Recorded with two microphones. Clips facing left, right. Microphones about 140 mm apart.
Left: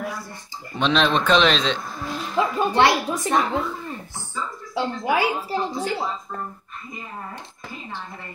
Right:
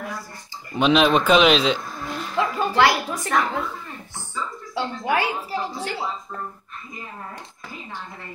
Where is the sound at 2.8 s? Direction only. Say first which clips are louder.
Even; 25° left (ahead or behind).